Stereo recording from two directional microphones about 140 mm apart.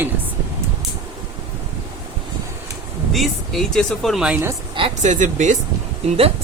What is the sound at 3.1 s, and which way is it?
Speech, centre (ahead or behind).